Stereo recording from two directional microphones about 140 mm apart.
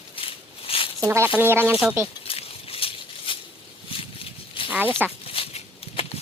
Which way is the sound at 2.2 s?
45° left (ahead or behind).